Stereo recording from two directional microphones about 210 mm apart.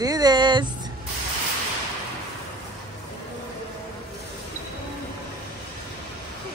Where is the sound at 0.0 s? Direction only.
20° right (ahead or behind).